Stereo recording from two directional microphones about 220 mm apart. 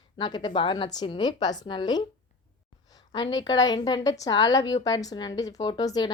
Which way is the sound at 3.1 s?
20° left (ahead or behind).